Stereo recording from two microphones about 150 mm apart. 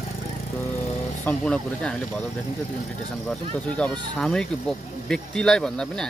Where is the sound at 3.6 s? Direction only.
5° left (ahead or behind).